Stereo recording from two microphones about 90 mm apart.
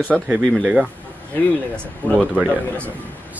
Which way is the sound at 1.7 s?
10° left (ahead or behind).